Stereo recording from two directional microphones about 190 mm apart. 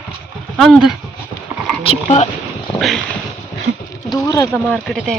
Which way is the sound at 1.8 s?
30° left (ahead or behind).